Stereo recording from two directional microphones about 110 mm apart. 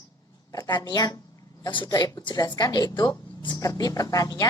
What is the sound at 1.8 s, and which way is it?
Speech, 30° left (ahead or behind).